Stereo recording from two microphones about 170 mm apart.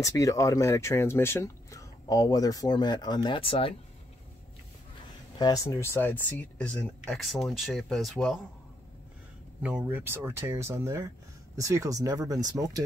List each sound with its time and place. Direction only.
0.0 s speech: 20° left (ahead or behind)
5.4 s speech: 20° left (ahead or behind); by 8.4 s centre (ahead or behind)
9.6 s speech: 5° right (ahead or behind)